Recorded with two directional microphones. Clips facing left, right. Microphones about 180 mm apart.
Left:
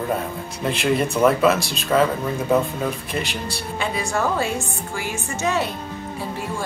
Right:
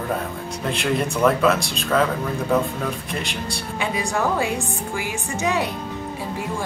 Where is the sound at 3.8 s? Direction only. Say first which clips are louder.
Even; 15° right (ahead or behind).